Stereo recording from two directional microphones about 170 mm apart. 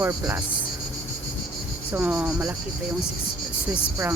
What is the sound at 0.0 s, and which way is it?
Speech, 15° right (ahead or behind).